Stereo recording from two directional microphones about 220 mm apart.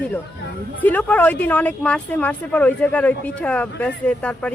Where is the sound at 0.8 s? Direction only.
5° left (ahead or behind).